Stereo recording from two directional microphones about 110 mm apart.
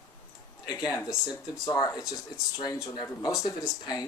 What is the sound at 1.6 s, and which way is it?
Speech, 35° left (ahead or behind).